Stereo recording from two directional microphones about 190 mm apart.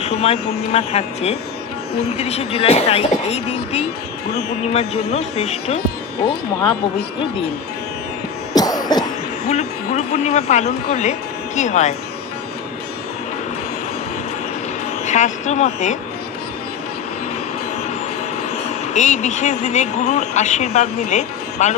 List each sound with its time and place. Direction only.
0.0 s vehicle: 35° left (ahead or behind)
0.7 s speech: 35° left (ahead or behind)
8.5 s cough: 20° left (ahead or behind)
9.5 s speech: 35° left (ahead or behind)
15.0 s speech: 40° left (ahead or behind)
18.9 s speech: 40° left (ahead or behind)